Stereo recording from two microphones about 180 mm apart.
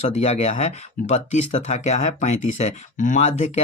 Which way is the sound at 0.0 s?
35° left (ahead or behind).